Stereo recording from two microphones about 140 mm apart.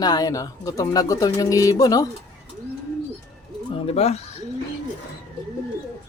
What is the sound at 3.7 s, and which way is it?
Speech, 45° left (ahead or behind).